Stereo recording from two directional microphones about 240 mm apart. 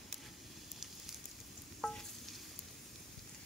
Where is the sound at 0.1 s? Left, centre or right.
Centre.